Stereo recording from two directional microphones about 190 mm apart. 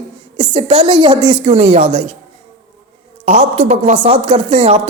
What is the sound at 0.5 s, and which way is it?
A woman's voice, 25° right (ahead or behind).